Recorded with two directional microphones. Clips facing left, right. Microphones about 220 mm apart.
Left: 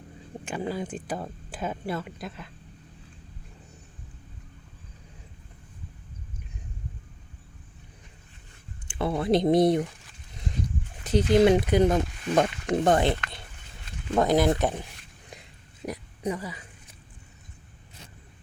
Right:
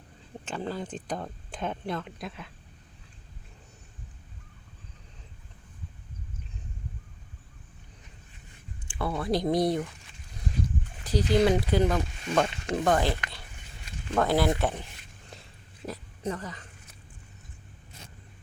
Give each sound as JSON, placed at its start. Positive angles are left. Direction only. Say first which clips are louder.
{"t": 0.4, "sound": "speech", "louder": "left 3 dB", "side_deg": 10}
{"t": 8.9, "sound": "speech", "louder": "left 5 dB", "side_deg": 25}
{"t": 11.0, "sound": "speech", "louder": "left 4 dB", "side_deg": 20}
{"t": 14.2, "sound": "speech", "louder": "left 3 dB", "side_deg": 20}
{"t": 15.9, "sound": "speech", "louder": "left 3 dB", "side_deg": 10}